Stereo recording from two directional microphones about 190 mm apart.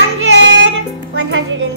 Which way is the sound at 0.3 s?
65° right (ahead or behind).